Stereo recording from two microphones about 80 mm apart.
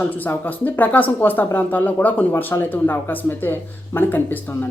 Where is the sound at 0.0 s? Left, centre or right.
Left.